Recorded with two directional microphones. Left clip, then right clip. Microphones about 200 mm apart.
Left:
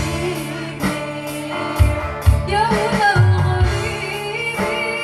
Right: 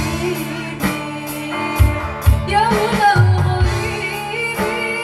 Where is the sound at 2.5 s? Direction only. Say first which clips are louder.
Right 2 dB; 25° right (ahead or behind).